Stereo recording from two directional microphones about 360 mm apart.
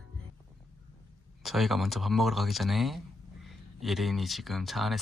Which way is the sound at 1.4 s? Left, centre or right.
Centre.